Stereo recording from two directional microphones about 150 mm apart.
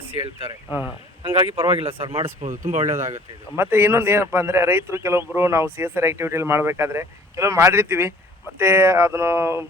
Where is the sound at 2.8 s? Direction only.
20° right (ahead or behind).